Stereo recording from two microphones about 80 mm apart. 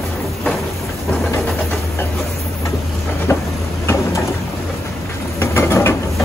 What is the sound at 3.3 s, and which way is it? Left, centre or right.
Vehicle, left.